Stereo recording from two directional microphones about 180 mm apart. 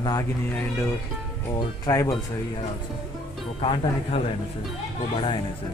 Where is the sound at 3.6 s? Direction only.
30° left (ahead or behind).